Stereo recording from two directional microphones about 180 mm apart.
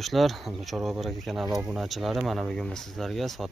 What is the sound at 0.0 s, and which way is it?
Speech, centre (ahead or behind).